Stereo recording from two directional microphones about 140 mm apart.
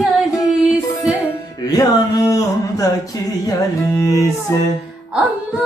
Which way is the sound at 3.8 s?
25° left (ahead or behind).